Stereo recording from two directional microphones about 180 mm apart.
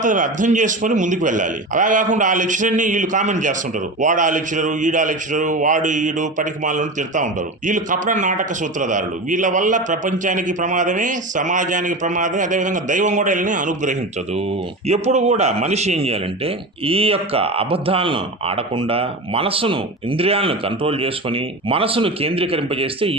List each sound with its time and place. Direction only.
0.0 s a man's voice: 45° right (ahead or behind)